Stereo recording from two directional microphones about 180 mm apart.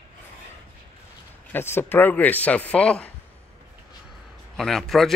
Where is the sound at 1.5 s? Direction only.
10° left (ahead or behind).